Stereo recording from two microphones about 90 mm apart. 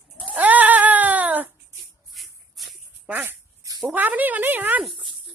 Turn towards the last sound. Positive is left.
turn(degrees=-20)  # may be behind; listen again after turning